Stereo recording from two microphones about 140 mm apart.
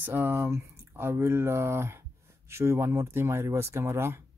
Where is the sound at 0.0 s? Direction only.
15° right (ahead or behind).